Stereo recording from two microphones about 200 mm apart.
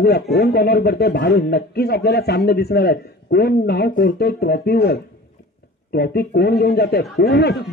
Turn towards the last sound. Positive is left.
turn(degrees=55)  # may be behind; listen again after turning